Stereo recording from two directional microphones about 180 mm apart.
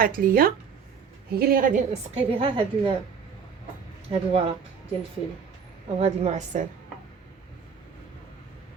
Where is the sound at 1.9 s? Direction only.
35° right (ahead or behind).